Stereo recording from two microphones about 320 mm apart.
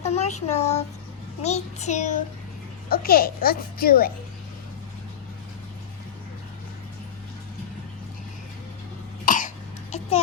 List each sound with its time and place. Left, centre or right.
0.0 s child singing: centre
0.3 s a child's voice: left
9.2 s cough: left